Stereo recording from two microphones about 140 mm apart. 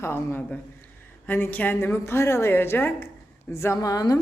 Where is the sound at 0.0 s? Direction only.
15° left (ahead or behind).